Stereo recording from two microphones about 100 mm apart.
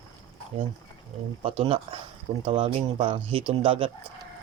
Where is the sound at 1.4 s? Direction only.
75° right (ahead or behind).